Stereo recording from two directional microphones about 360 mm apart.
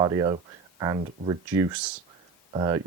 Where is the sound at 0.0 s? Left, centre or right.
Centre.